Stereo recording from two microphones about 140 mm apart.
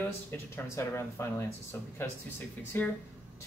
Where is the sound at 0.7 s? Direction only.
20° left (ahead or behind).